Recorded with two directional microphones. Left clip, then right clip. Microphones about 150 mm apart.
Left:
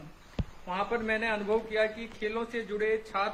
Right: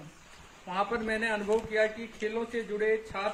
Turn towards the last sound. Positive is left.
turn(degrees=-60)  # may be behind; listen again after turning